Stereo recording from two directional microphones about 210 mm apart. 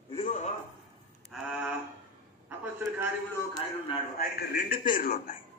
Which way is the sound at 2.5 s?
10° right (ahead or behind).